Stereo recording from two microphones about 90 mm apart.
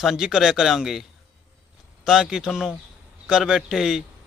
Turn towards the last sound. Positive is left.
turn(degrees=-5)  # may be behind; listen again after turning